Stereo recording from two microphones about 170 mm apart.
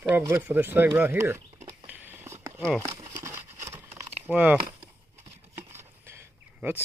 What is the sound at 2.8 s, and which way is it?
Crumpling, 20° right (ahead or behind).